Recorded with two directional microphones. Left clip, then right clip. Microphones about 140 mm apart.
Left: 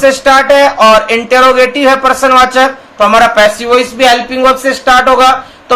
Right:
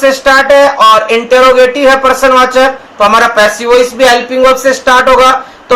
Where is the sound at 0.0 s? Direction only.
30° left (ahead or behind).